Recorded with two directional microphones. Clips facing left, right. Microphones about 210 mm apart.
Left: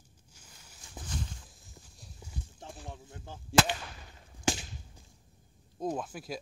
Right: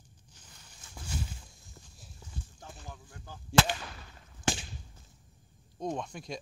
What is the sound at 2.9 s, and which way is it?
Speech, 25° left (ahead or behind).